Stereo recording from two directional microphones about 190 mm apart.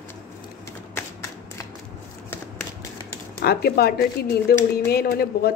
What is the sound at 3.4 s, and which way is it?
Speech, 55° left (ahead or behind).